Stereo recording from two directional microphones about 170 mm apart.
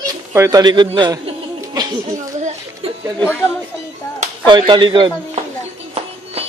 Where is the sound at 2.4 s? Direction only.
45° right (ahead or behind).